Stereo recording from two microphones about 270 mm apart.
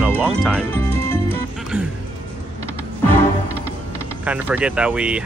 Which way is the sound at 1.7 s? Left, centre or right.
Centre.